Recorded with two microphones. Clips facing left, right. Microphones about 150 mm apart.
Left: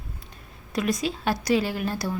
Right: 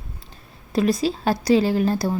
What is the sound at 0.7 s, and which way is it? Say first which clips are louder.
Speech: right 6 dB; 30° right (ahead or behind).